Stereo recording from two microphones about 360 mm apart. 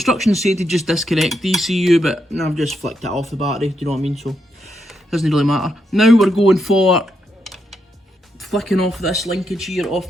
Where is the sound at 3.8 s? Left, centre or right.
Centre.